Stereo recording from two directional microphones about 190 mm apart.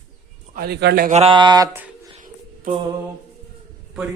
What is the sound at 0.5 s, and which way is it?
Speech, 55° right (ahead or behind).